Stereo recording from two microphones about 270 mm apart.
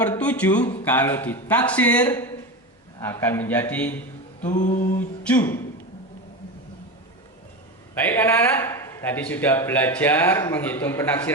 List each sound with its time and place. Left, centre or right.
0.0 s a man's voice: centre
4.5 s mantra: left
4.9 s a man's voice: centre
7.9 s a man's voice: centre